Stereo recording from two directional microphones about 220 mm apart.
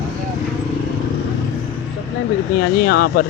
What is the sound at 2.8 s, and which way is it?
Speech, 45° left (ahead or behind).